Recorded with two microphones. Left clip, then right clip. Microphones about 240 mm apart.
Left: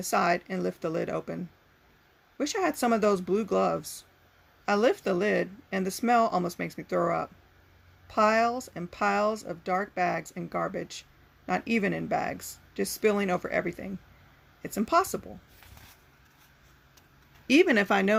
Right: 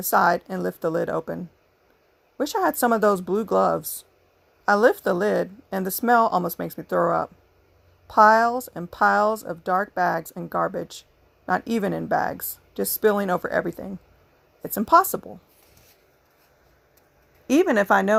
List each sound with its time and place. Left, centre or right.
0.0 s speech: right
2.4 s speech: right
17.4 s speech: centre